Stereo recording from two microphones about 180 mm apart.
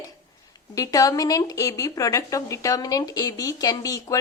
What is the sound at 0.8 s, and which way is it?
A woman's voice, 20° left (ahead or behind).